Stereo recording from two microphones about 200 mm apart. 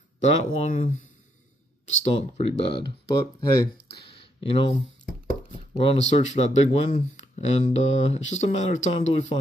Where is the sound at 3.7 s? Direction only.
50° left (ahead or behind).